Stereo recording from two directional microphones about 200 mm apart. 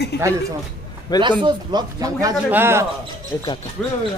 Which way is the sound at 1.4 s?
20° right (ahead or behind).